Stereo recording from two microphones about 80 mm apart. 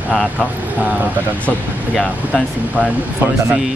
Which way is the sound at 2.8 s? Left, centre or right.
Centre.